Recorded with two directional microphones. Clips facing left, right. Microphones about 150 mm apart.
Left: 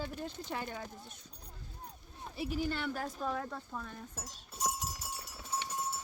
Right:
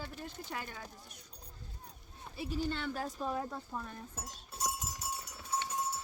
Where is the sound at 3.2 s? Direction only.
15° right (ahead or behind).